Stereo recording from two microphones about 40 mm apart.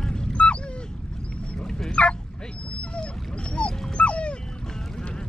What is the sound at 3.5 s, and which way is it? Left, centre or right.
Dog, left.